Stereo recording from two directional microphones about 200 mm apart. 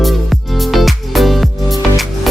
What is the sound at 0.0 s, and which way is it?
Music, centre (ahead or behind).